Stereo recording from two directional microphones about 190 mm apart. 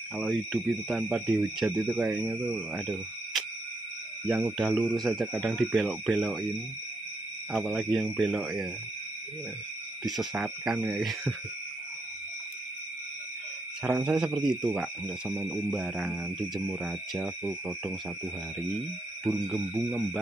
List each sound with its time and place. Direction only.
0.2 s speech: centre (ahead or behind)
7.5 s speech: centre (ahead or behind)
10.1 s speech: 5° right (ahead or behind)
13.8 s speech: 5° right (ahead or behind)
15.6 s speech: centre (ahead or behind)